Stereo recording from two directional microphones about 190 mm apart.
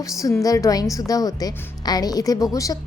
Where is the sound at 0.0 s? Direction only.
15° left (ahead or behind).